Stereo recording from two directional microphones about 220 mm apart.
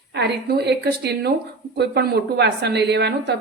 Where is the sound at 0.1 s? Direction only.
50° right (ahead or behind).